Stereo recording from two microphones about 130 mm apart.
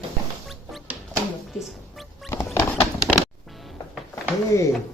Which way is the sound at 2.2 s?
20° left (ahead or behind).